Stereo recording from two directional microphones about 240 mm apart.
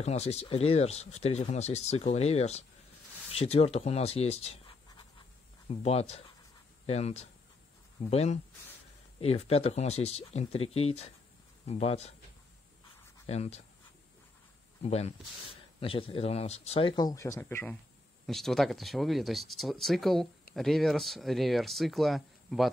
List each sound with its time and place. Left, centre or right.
0.0 s speech: left
13.3 s speech: left
14.8 s speech: left; by 22.7 s centre